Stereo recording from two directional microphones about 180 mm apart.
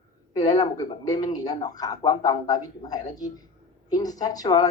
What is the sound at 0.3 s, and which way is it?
Speech, 20° left (ahead or behind).